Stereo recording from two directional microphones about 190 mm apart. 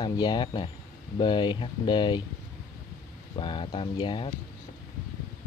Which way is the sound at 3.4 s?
25° left (ahead or behind).